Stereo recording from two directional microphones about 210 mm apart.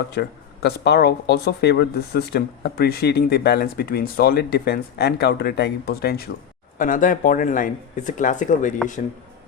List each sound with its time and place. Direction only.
0.1 s speech: 50° left (ahead or behind)